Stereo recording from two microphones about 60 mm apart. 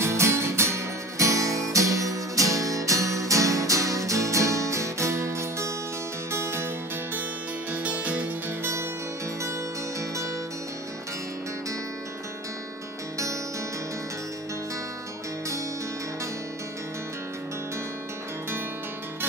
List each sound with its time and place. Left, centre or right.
0.0 s music: right
7.7 s music: right